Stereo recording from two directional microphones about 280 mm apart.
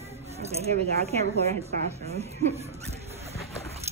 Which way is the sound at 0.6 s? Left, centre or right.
Right.